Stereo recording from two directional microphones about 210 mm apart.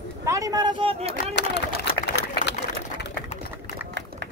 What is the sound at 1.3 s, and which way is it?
Run, 55° left (ahead or behind).